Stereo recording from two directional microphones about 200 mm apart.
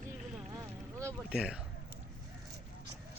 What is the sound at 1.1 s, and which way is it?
Speech, 5° right (ahead or behind).